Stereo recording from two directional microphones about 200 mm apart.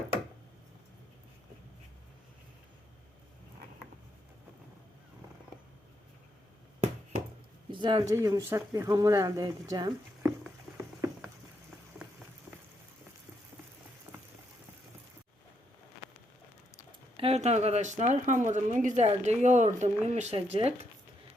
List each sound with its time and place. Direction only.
7.7 s speech: 25° right (ahead or behind)
17.2 s speech: 30° right (ahead or behind)